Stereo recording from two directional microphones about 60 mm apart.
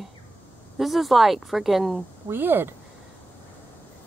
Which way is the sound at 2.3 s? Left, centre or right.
Right.